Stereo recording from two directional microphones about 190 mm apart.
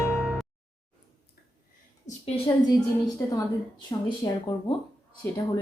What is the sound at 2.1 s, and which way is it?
A woman's voice, 30° left (ahead or behind).